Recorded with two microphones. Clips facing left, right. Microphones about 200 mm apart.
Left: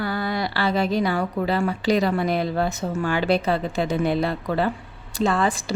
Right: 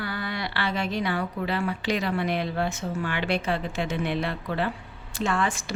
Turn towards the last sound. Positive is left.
turn(degrees=35)  # may be behind; listen again after turning